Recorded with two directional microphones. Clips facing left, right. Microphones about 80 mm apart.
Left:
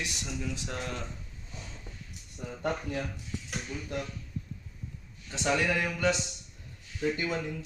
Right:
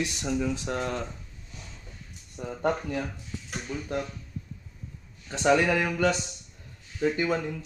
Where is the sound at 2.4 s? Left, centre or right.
Right.